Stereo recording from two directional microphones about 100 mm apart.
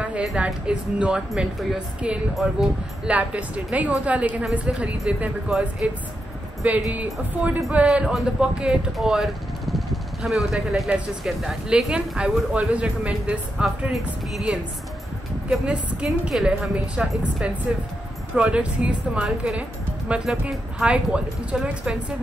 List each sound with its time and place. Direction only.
0.0 s music: 15° right (ahead or behind)
0.4 s speech: 10° right (ahead or behind)